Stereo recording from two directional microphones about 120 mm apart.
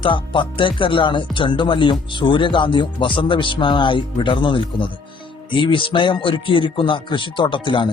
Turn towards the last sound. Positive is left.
turn(degrees=40)  # may be behind; listen again after turning